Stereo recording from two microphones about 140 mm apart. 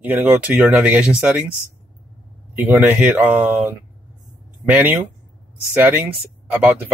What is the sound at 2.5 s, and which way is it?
Speech, 10° right (ahead or behind).